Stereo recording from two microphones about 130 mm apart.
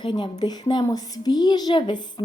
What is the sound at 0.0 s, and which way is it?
Speech, 35° left (ahead or behind).